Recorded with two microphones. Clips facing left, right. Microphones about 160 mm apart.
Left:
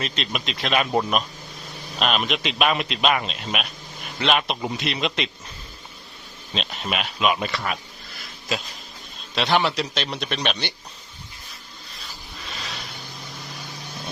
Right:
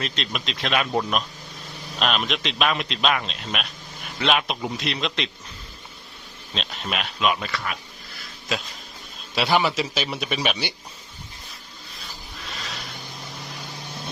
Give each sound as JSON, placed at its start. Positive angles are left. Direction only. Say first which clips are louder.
{"t": 0.0, "sound": "speech", "louder": "left 1 dB", "side_deg": 5}
{"t": 0.9, "sound": "speech", "louder": "left 2 dB", "side_deg": 10}
{"t": 6.5, "sound": "speech", "louder": "left 2 dB", "side_deg": 5}
{"t": 7.3, "sound": "speech", "louder": "left 3 dB", "side_deg": 20}
{"t": 9.3, "sound": "speech", "louder": "even", "side_deg": -5}